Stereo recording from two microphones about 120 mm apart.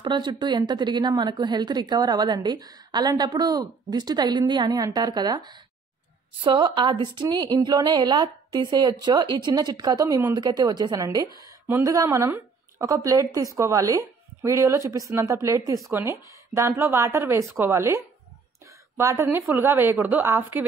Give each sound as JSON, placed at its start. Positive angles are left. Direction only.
{"t": 0.0, "sound": "a woman's voice", "side_deg": -40}